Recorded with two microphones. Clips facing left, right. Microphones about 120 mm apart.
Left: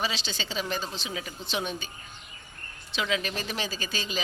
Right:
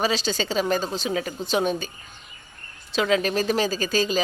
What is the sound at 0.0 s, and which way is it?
Speech, 45° right (ahead or behind).